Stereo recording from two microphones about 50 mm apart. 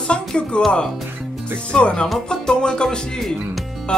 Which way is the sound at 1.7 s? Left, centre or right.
Left.